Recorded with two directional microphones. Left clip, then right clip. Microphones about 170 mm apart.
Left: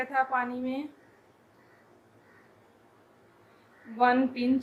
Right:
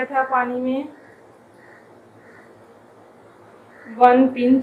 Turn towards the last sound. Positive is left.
turn(degrees=90)